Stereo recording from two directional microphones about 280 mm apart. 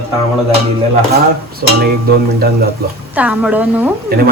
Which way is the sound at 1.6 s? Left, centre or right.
Right.